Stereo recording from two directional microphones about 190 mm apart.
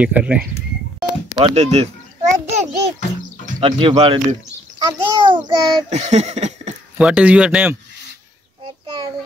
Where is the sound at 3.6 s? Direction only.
30° right (ahead or behind).